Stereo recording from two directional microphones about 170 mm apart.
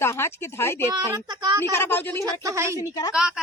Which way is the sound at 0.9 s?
25° right (ahead or behind).